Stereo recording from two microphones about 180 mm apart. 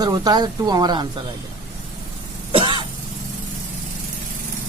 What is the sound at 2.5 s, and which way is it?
Cough, 25° right (ahead or behind).